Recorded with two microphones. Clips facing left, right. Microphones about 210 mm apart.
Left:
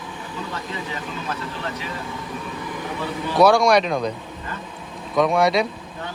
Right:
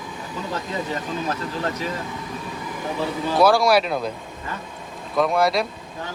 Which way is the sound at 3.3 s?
Centre (ahead or behind).